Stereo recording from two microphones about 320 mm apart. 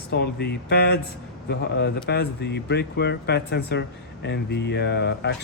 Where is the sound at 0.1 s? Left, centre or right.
Left.